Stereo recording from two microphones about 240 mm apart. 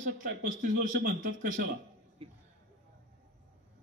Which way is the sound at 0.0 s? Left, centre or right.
Right.